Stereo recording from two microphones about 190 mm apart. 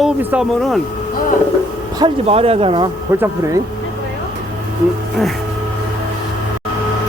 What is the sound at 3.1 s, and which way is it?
Speech, 15° right (ahead or behind).